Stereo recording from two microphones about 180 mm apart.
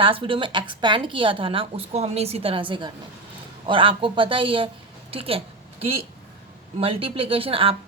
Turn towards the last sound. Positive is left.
turn(degrees=-30)  # may be behind; listen again after turning